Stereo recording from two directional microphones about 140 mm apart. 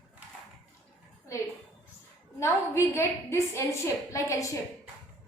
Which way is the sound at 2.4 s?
20° left (ahead or behind).